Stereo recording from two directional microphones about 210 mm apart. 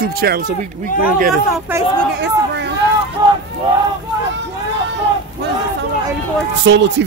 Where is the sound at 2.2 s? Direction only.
55° right (ahead or behind).